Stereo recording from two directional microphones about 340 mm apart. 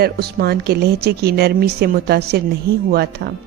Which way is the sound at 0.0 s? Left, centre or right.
Right.